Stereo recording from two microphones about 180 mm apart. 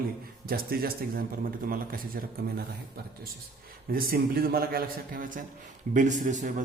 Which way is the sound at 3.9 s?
55° right (ahead or behind).